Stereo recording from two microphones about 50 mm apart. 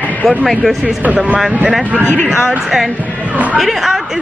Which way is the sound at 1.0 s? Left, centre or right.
Right.